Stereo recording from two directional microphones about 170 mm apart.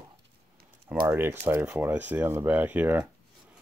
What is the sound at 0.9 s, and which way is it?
Speech, 10° right (ahead or behind).